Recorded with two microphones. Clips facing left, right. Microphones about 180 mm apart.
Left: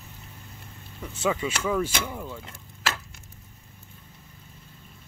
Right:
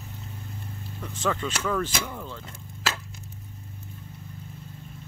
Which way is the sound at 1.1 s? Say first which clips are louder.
Left 2 dB; 10° left (ahead or behind).